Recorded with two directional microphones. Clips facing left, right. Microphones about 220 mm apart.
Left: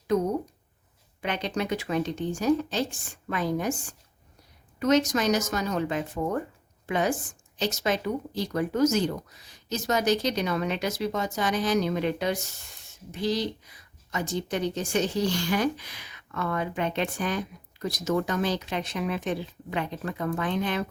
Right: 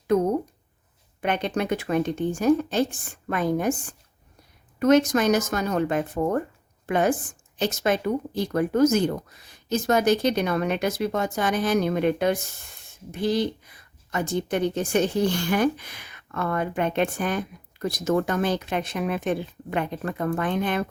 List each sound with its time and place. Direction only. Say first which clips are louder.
1.2 s a woman's voice: right 4 dB; 55° right (ahead or behind)